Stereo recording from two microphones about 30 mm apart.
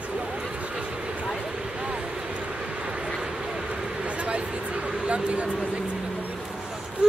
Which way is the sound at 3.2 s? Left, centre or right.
Right.